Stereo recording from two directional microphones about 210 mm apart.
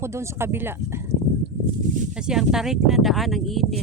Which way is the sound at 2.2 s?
5° right (ahead or behind).